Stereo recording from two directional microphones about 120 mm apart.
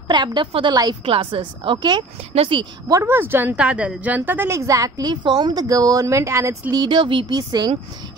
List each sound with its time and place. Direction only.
0.1 s a woman's voice: 40° right (ahead or behind)
2.9 s a woman's voice: 20° right (ahead or behind); by 7.7 s 35° right (ahead or behind)